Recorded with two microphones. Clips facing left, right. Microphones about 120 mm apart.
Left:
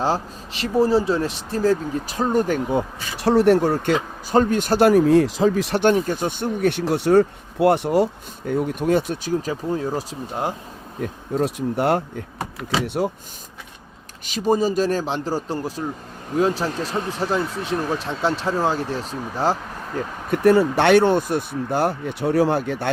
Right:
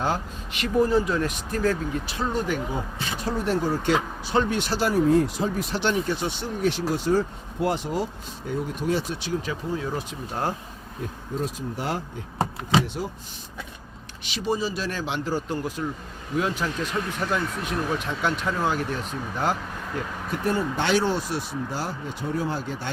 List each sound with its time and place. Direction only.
0.0 s speech: 30° left (ahead or behind)
2.7 s speech: 75° left (ahead or behind)
4.3 s speech: 45° left (ahead or behind); by 5.8 s 85° left
5.8 s speech: 45° left (ahead or behind)
11.0 s speech: 60° left (ahead or behind)
14.3 s speech: 45° left (ahead or behind)
20.3 s speech: 75° left (ahead or behind)